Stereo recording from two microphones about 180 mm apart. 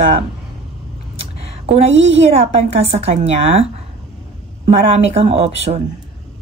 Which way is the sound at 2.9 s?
35° right (ahead or behind).